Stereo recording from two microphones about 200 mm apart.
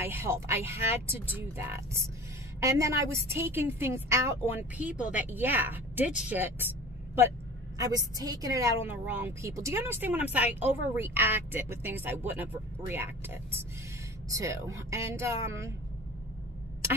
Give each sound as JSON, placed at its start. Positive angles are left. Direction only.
{"t": 0.0, "sound": "speech", "side_deg": -10}
{"t": 7.7, "sound": "speech", "side_deg": -15}